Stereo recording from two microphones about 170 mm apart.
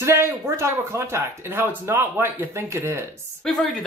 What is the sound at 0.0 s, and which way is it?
Speech, 15° right (ahead or behind).